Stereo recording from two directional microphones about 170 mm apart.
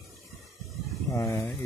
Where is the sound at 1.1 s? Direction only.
15° left (ahead or behind).